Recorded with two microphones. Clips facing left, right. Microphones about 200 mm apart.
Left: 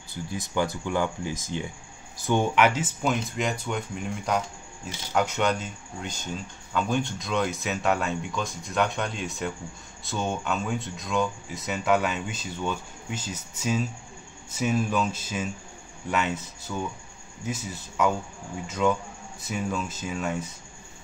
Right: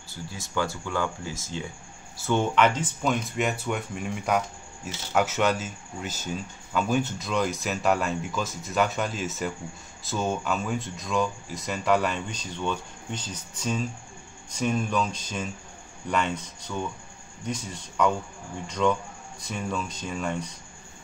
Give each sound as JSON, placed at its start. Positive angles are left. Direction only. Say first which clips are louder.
{"t": 0.1, "sound": "speech", "louder": "left 2 dB", "side_deg": 15}
{"t": 3.3, "sound": "speech", "louder": "right 1 dB", "side_deg": -5}